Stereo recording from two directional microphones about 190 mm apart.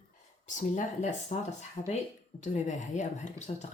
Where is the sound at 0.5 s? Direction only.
40° left (ahead or behind).